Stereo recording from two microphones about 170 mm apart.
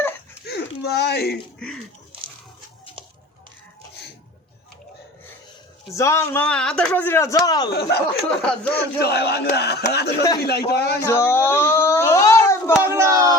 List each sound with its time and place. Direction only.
0.4 s a sound: 70° left (ahead or behind)
5.9 s speech: 15° left (ahead or behind)
7.7 s speech: 70° left (ahead or behind)
8.3 s speech: 5° left (ahead or behind)
8.7 s speech: 70° left (ahead or behind)
11.0 s speech: 15° left (ahead or behind)
12.9 s speech: 15° right (ahead or behind)